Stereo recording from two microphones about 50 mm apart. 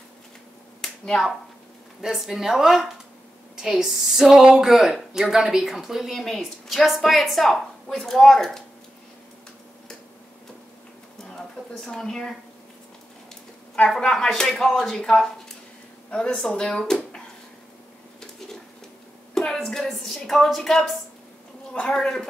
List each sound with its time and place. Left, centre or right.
0.7 s finger snapping: centre
2.0 s speech: centre
11.3 s a woman's voice: centre
13.8 s speech: centre
15.0 s speech: centre
19.3 s a sound: centre
20.2 s speech: centre